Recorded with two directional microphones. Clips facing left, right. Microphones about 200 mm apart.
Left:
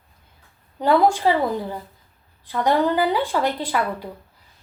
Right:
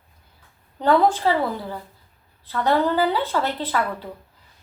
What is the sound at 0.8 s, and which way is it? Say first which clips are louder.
A woman's voice: left 1 dB; 10° left (ahead or behind).